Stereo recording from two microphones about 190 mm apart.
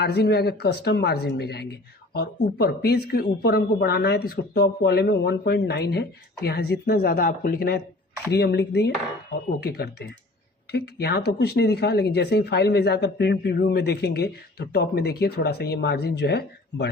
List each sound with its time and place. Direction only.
0.0 s speech: 60° left (ahead or behind)
8.3 s speech: 60° left (ahead or behind)